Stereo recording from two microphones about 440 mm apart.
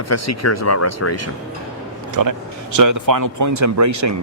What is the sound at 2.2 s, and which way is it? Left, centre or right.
Speech, right.